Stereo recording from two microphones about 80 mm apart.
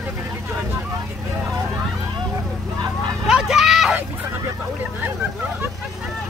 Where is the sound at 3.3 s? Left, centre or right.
Centre.